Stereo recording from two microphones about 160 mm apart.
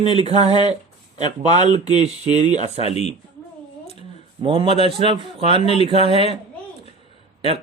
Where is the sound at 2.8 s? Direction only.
40° left (ahead or behind).